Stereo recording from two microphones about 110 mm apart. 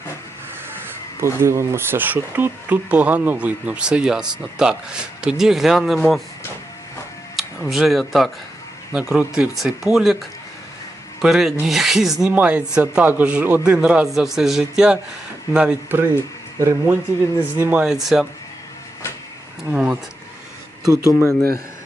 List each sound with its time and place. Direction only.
1.2 s speech: 25° right (ahead or behind); by 6.2 s centre (ahead or behind)
7.3 s speech: centre (ahead or behind)
12.3 s speech: 15° right (ahead or behind)
15.5 s speech: 15° right (ahead or behind)
17.8 s speech: 5° right (ahead or behind)
19.7 s speech: 10° right (ahead or behind)
20.8 s speech: 30° right (ahead or behind)